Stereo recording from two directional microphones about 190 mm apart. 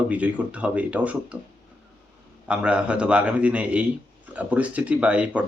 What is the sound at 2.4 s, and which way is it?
Speech, 5° right (ahead or behind).